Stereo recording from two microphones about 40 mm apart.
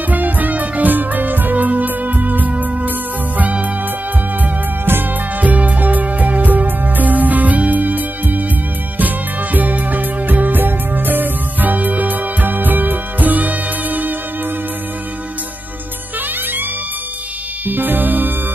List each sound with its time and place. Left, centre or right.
0.1 s music: right
5.4 s music: right
17.6 s music: right